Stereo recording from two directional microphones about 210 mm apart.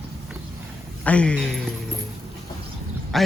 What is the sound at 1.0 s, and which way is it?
Speech, 5° left (ahead or behind).